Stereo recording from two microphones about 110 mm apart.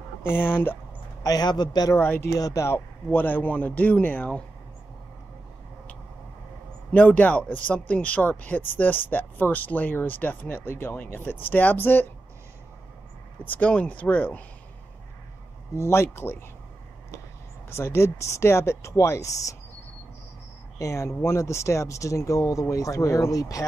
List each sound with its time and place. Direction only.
0.2 s speech: 20° left (ahead or behind)
1.2 s a man's voice: 35° left (ahead or behind)
2.0 s speech: 20° left (ahead or behind)
6.9 s speech: 15° left (ahead or behind)
13.5 s speech: 10° left (ahead or behind)
15.7 s speech: 25° left (ahead or behind)
17.6 s speech: 25° left (ahead or behind)
20.8 s speech: 30° left (ahead or behind)